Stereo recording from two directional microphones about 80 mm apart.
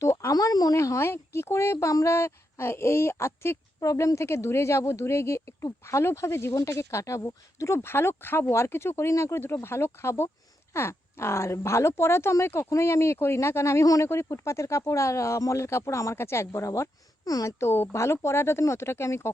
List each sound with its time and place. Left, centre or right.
0.0 s a sound: left
0.3 s speech: left
0.8 s speech: left
3.8 s speech: left